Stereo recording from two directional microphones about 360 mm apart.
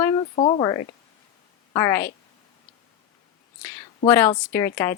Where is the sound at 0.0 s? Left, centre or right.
Centre.